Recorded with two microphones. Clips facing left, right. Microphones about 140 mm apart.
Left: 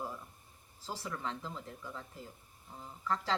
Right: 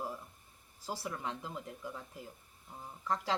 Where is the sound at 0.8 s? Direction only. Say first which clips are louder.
Right 1 dB; 10° right (ahead or behind).